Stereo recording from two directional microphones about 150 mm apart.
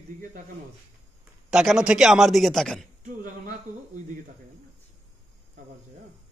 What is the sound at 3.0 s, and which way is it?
Speech, 60° right (ahead or behind).